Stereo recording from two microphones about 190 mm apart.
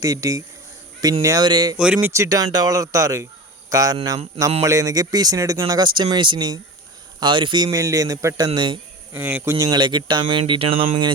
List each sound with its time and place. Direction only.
0.0 s speech: 15° right (ahead or behind)
1.8 s speech: 10° right (ahead or behind); by 8.8 s 25° right (ahead or behind)
9.1 s speech: 10° right (ahead or behind); by 10.8 s 30° right (ahead or behind)